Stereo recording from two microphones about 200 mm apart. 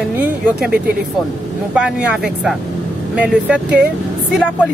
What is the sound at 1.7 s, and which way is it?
Speech, 5° right (ahead or behind).